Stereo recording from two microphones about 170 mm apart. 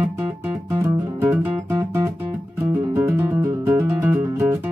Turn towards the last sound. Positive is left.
turn(degrees=-15)  # may be behind; listen again after turning